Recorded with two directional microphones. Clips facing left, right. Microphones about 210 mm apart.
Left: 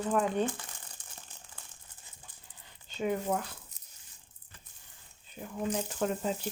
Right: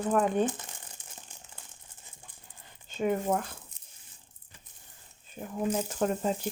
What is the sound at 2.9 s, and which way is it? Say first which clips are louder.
Speech: right 3 dB; 50° right (ahead or behind).